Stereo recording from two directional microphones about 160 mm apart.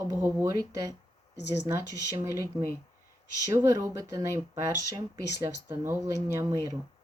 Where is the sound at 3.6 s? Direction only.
25° right (ahead or behind).